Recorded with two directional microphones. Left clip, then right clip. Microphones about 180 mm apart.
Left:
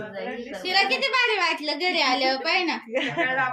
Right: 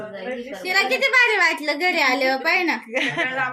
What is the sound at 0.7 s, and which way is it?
A woman's voice, 35° right (ahead or behind).